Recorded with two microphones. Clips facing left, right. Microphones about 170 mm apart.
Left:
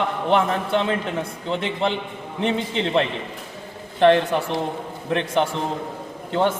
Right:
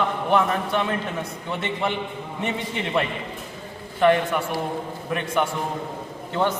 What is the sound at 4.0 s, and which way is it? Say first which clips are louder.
A man's voice: left 3 dB; 25° left (ahead or behind).